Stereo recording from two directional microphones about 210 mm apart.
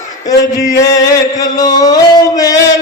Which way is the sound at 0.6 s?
15° left (ahead or behind).